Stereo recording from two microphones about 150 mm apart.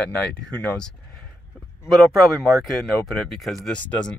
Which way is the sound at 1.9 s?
Centre (ahead or behind).